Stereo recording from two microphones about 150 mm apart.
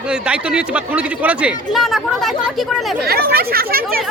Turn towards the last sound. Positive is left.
turn(degrees=-80)